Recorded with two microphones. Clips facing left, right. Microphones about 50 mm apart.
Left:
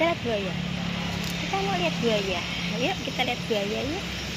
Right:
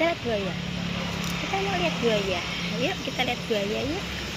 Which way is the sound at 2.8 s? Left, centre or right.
Centre.